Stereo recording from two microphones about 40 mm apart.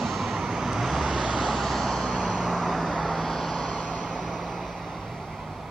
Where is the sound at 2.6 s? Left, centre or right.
Centre.